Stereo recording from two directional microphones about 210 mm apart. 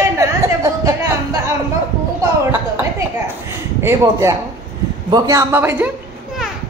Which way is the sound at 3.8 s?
10° right (ahead or behind).